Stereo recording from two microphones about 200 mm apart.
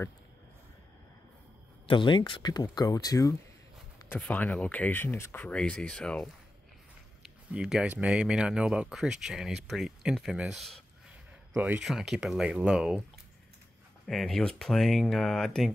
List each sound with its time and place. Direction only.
1.9 s speech: 25° left (ahead or behind); by 13.0 s 5° right (ahead or behind)
14.0 s speech: centre (ahead or behind)